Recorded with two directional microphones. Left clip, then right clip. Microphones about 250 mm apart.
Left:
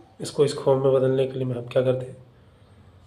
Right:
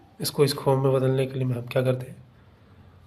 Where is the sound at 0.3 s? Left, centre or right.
Right.